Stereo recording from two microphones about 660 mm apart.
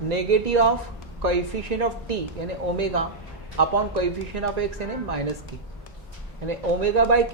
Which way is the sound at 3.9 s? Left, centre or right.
Right.